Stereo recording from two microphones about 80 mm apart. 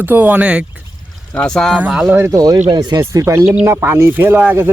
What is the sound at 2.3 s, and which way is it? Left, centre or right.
Speech, right.